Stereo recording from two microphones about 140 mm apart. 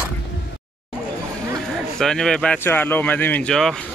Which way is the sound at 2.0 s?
5° left (ahead or behind).